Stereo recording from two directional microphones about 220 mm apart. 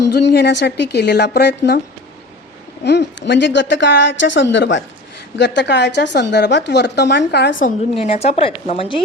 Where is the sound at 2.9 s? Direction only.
50° left (ahead or behind).